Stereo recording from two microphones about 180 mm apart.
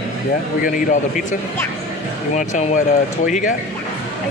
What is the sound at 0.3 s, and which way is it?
Speech, 50° left (ahead or behind).